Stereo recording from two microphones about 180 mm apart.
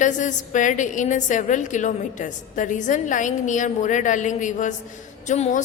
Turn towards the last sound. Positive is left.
turn(degrees=40)  # may be behind; listen again after turning